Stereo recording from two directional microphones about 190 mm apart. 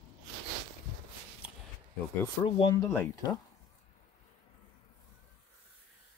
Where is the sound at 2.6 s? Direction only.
20° left (ahead or behind).